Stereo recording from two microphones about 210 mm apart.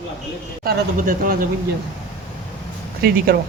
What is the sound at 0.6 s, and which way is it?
Speech, 40° right (ahead or behind).